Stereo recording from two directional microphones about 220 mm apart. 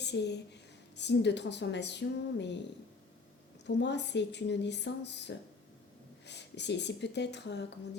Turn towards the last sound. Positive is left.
turn(degrees=50)  # may be behind; listen again after turning